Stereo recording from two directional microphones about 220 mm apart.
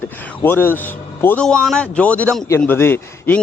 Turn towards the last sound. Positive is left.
turn(degrees=10)  # may be behind; listen again after turning